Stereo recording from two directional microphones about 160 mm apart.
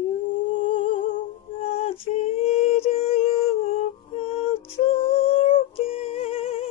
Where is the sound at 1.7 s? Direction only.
35° left (ahead or behind).